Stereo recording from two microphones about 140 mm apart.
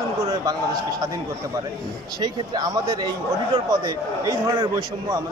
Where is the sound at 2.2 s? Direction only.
30° right (ahead or behind).